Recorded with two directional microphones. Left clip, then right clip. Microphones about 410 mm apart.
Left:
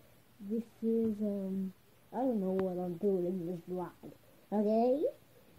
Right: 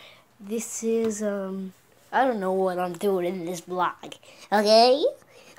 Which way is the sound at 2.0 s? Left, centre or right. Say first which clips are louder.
Right 12 dB; right.